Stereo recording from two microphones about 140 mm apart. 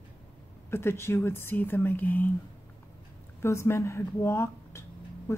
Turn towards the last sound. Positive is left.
turn(degrees=20)  # may be behind; listen again after turning